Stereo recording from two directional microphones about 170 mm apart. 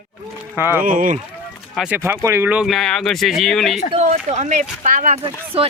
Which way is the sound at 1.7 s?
5° right (ahead or behind).